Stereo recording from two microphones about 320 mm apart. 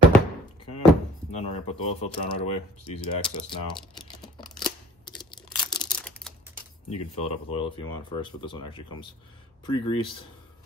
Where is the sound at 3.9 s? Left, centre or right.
Centre.